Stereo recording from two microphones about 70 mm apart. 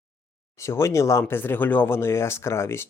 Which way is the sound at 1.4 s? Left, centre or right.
Left.